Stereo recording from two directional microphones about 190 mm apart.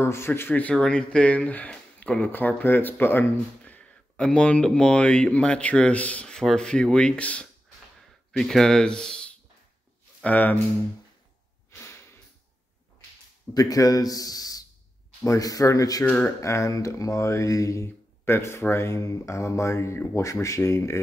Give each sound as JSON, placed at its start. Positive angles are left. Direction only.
{"t": 0.0, "sound": "speech", "side_deg": 15}
{"t": 11.7, "sound": "a sound", "side_deg": 15}
{"t": 13.5, "sound": "a man's voice", "side_deg": 20}